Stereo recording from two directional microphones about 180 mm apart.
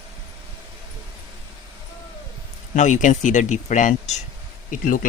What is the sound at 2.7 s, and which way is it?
Speech, 45° left (ahead or behind).